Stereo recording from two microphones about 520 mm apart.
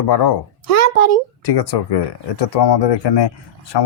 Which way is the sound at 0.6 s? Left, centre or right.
Right.